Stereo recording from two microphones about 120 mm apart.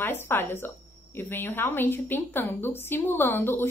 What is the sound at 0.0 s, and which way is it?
Speech, 20° left (ahead or behind).